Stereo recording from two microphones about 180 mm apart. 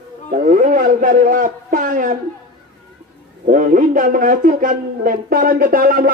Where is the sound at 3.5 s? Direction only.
45° right (ahead or behind).